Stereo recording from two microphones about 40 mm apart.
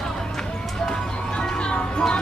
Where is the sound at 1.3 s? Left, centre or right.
Left.